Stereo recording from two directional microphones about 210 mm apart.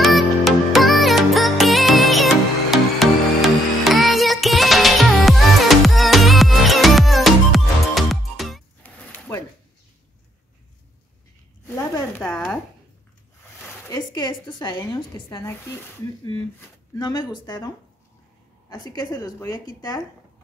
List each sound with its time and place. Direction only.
0.0 s music: centre (ahead or behind)
11.6 s zipper: 10° left (ahead or behind)
13.8 s a sound: 20° left (ahead or behind)
17.0 s a woman's voice: 20° left (ahead or behind)